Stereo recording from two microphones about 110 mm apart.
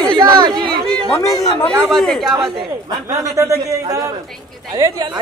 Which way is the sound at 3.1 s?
30° right (ahead or behind).